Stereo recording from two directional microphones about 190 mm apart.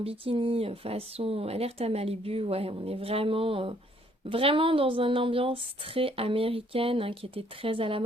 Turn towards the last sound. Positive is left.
turn(degrees=-30)  # may be behind; listen again after turning